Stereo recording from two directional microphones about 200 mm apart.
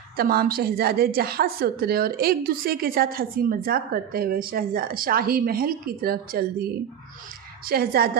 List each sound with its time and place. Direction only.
0.2 s a woman's voice: 50° right (ahead or behind)
7.7 s a woman's voice: 50° right (ahead or behind)